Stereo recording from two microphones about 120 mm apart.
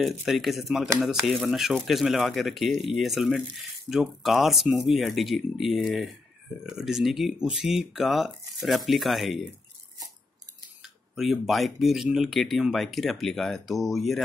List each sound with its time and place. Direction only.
0.0 s speech: centre (ahead or behind)
10.8 s speech: centre (ahead or behind)